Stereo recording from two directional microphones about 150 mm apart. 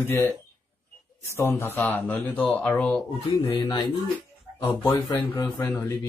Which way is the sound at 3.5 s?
30° left (ahead or behind).